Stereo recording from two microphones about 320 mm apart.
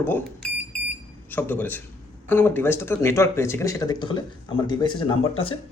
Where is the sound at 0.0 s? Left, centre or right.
Centre.